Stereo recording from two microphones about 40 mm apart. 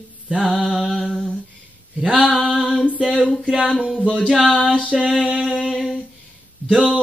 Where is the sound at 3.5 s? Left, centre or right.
Centre.